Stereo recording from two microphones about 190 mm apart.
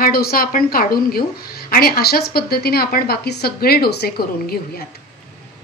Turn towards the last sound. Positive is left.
turn(degrees=55)  # may be behind; listen again after turning